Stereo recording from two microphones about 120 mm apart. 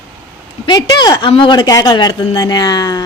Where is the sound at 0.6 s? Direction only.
35° left (ahead or behind).